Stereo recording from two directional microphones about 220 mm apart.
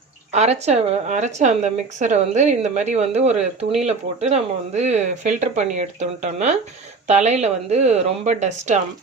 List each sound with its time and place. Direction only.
0.3 s speech: 30° right (ahead or behind)